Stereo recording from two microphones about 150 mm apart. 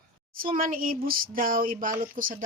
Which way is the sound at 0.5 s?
65° right (ahead or behind).